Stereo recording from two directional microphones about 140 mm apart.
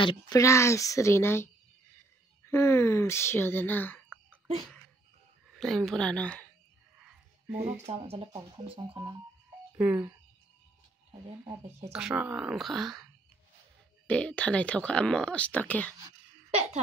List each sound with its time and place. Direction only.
0.3 s a woman's voice: 20° left (ahead or behind)
5.5 s speech: centre (ahead or behind)
7.1 s music: 10° right (ahead or behind)
7.8 s speech: 45° right (ahead or behind)
9.8 s speech: 15° right (ahead or behind)
11.9 s speech: 5° right (ahead or behind); by 15.9 s 10° left (ahead or behind)
16.4 s speech: 50° right (ahead or behind)